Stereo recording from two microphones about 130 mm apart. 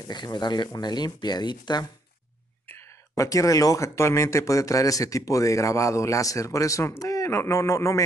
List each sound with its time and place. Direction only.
0.1 s speech: 35° left (ahead or behind)
2.6 s speech: 20° left (ahead or behind)